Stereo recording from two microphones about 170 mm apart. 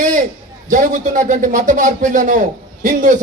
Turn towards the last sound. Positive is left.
turn(degrees=-45)  # may be behind; listen again after turning